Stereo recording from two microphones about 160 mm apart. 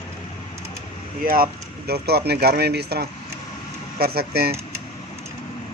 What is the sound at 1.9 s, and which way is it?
Speech, 85° right.